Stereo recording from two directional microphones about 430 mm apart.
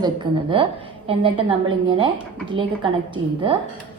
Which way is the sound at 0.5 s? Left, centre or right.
Centre.